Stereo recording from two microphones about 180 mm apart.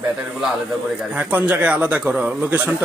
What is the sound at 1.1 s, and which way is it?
A man's voice, 10° right (ahead or behind).